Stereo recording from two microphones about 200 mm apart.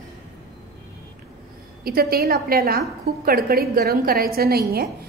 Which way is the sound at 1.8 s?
50° right (ahead or behind).